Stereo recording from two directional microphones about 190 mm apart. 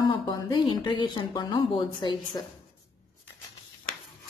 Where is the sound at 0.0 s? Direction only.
25° left (ahead or behind).